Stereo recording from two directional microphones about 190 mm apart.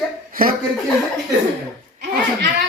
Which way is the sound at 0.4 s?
50° right (ahead or behind).